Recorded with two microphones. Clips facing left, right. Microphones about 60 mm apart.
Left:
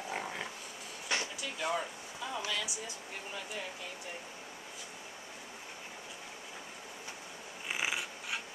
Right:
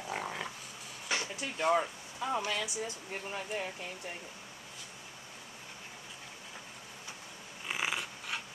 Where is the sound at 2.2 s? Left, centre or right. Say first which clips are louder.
Right 4 dB; right.